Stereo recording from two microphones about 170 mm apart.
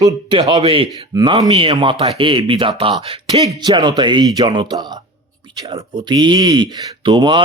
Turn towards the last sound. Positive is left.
turn(degrees=-25)  # may be behind; listen again after turning